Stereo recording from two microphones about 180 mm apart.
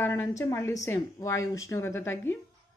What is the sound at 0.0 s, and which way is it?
A woman's voice, 15° left (ahead or behind).